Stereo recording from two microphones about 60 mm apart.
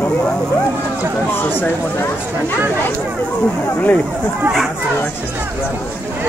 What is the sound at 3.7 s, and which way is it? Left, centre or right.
Speech, left.